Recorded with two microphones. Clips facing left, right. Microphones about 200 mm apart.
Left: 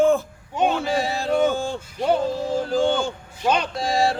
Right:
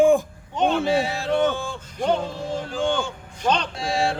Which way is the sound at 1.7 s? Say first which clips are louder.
Left 1 dB; 10° left (ahead or behind).